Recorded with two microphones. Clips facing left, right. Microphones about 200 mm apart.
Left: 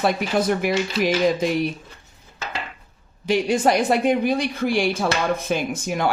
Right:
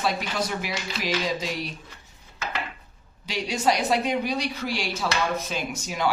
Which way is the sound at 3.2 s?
50° left (ahead or behind).